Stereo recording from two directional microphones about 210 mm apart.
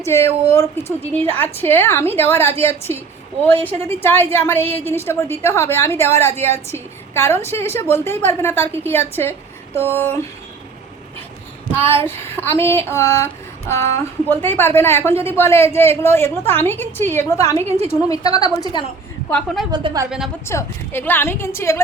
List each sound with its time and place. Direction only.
0.0 s a woman's voice: 10° left (ahead or behind)
12.0 s a woman's voice: 10° left (ahead or behind)
19.3 s a woman's voice: 5° left (ahead or behind)
19.7 s a woman's voice: 20° right (ahead or behind)
20.1 s a woman's voice: centre (ahead or behind)
20.5 s a woman's voice: 10° left (ahead or behind)